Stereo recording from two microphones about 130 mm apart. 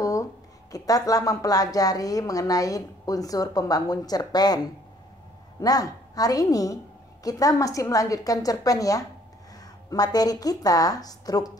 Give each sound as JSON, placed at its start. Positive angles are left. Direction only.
{"t": 0.0, "sound": "speech", "side_deg": 25}
{"t": 5.6, "sound": "speech", "side_deg": 30}